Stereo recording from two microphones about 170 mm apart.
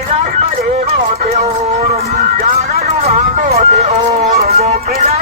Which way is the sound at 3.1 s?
40° right (ahead or behind).